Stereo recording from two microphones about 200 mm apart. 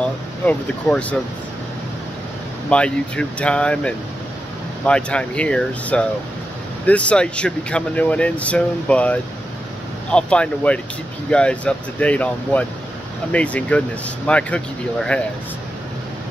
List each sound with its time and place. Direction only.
0.0 s speech: 5° left (ahead or behind)
2.7 s speech: 5° left (ahead or behind)